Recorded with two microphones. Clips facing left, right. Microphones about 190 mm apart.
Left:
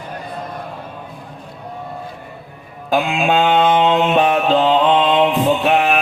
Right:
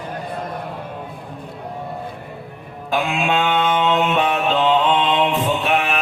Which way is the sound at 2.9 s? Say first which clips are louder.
Left 4 dB; 35° left (ahead or behind).